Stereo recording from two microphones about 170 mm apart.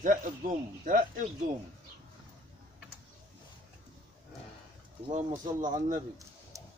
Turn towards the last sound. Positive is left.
turn(degrees=-45)  # may be behind; listen again after turning